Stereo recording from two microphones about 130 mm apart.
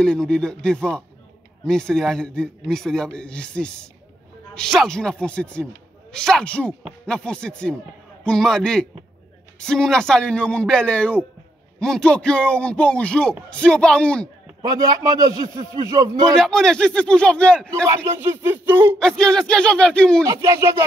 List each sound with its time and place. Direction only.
0.0 s a man's voice: 5° left (ahead or behind)
14.6 s a man's voice: 30° right (ahead or behind)
16.3 s a man's voice: 5° left (ahead or behind)
17.8 s speech: 20° right (ahead or behind)
18.9 s a man's voice: 5° left (ahead or behind)
20.2 s a man's voice: 25° right (ahead or behind)